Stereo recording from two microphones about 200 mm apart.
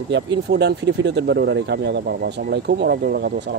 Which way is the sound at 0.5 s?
60° right (ahead or behind).